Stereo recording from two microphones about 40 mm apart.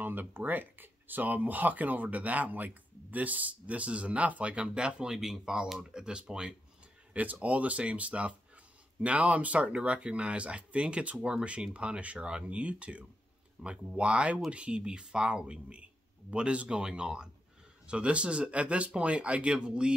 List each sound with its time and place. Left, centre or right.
0.0 s speech: right
5.1 s speech: centre
7.4 s speech: right